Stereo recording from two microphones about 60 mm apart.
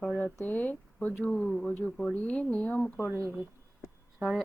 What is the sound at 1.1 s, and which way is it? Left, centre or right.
Speech, centre.